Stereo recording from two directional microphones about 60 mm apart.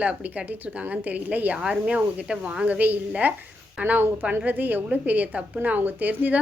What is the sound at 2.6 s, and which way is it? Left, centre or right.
A woman's voice, right.